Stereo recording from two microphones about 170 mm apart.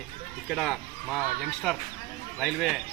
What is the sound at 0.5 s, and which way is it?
Speech, centre (ahead or behind).